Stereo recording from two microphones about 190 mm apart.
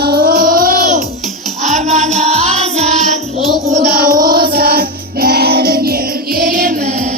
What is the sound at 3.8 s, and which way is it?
Music, 50° right (ahead or behind).